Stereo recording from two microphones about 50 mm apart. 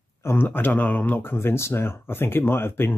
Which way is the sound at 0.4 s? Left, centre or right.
Left.